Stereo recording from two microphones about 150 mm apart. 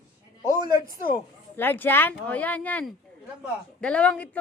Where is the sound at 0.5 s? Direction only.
25° right (ahead or behind).